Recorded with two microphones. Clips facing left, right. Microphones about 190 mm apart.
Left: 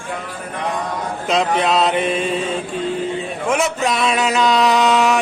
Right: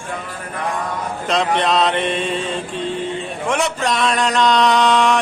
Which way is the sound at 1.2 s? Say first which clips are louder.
Left 1 dB; centre (ahead or behind).